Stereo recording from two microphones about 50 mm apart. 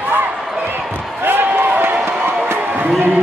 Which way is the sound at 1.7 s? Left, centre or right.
Right.